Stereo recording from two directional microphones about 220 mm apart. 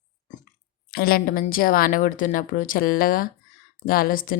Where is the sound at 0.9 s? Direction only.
45° left (ahead or behind).